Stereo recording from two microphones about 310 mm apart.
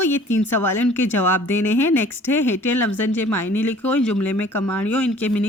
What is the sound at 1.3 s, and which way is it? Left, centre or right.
Speech, left.